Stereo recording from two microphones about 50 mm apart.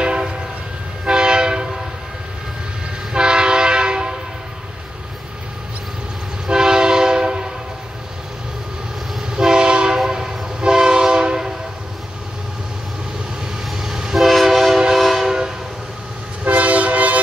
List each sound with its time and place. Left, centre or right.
0.0 s train: centre
3.1 s train: centre
6.4 s train: centre
9.3 s train: centre
13.7 s train: centre
16.4 s train: right